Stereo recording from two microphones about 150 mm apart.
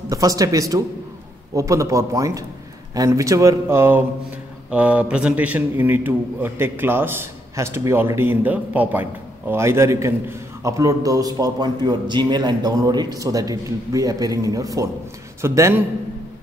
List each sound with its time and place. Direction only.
0.1 s a man's voice: 25° right (ahead or behind)